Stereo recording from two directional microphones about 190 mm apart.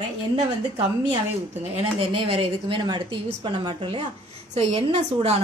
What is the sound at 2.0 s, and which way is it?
A woman's voice, 30° right (ahead or behind).